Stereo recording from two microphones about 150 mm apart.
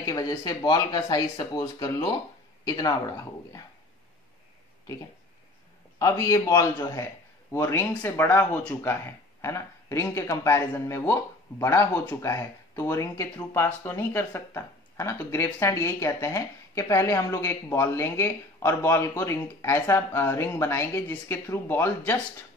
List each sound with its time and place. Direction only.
0.0 s speech: 25° left (ahead or behind)
5.9 s speech: 25° left (ahead or behind)